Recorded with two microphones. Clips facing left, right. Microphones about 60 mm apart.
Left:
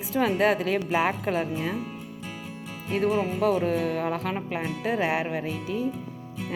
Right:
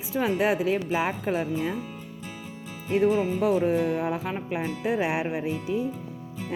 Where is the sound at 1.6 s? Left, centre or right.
Left.